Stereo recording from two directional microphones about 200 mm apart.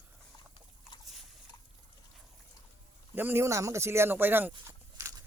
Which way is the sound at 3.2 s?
10° right (ahead or behind).